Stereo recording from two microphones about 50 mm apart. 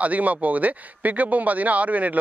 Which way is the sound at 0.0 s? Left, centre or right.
Right.